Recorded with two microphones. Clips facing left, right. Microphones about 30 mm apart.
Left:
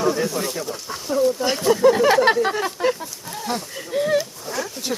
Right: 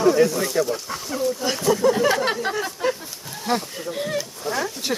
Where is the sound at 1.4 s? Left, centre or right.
Centre.